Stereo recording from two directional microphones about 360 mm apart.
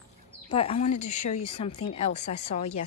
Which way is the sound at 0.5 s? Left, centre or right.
Centre.